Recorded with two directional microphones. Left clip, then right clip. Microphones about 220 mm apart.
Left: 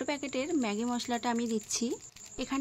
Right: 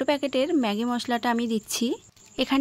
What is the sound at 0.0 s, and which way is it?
Speech, 35° right (ahead or behind).